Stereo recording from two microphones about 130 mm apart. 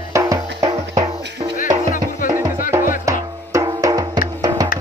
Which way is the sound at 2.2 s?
90° left.